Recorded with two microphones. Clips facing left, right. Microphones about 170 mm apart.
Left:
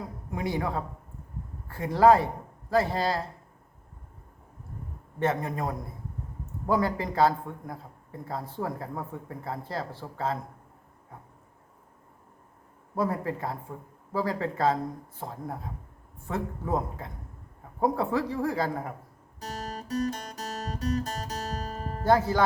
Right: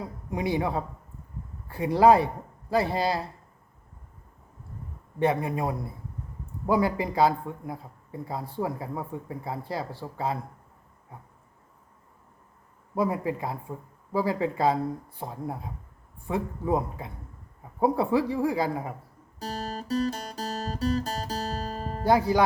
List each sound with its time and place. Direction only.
0.3 s a man's voice: 15° right (ahead or behind)
5.2 s a man's voice: 15° right (ahead or behind)
13.0 s a man's voice: 15° right (ahead or behind)
19.4 s guitar: 30° right (ahead or behind)
22.0 s a man's voice: 15° right (ahead or behind)